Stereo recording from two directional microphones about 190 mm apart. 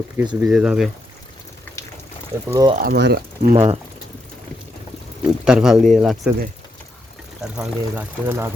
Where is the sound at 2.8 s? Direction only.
60° right (ahead or behind).